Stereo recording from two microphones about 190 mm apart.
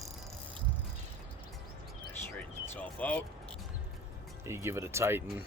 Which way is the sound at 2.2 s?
10° left (ahead or behind).